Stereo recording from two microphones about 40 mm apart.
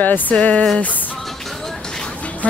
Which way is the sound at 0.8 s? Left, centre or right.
Left.